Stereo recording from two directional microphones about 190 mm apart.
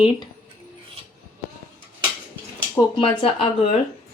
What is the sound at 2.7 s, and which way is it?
Speech, 25° left (ahead or behind).